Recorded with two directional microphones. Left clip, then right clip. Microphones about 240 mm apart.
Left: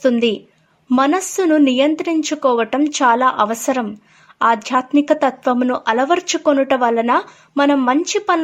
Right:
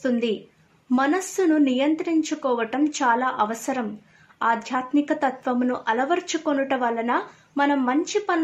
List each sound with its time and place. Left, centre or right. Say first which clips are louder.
0.0 s speech: left 8 dB; left